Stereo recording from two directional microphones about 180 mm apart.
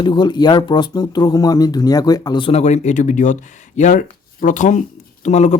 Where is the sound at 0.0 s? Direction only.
25° left (ahead or behind).